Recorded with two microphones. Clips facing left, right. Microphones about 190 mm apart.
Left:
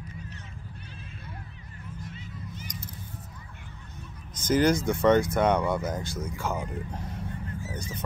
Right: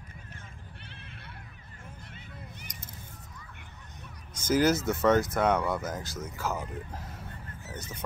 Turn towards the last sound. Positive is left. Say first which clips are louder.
# left 6 dB
turn(degrees=0)  # may be behind; listen again after turning